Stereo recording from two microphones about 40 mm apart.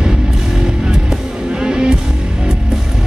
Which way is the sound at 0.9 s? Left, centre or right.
Centre.